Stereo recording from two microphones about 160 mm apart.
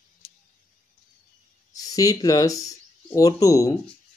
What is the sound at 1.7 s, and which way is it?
Speech, 20° left (ahead or behind).